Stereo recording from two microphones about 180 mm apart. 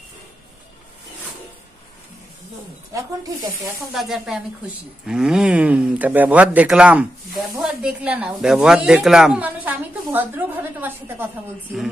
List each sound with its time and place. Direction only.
2.9 s speech: 20° right (ahead or behind)
3.9 s speech: centre (ahead or behind)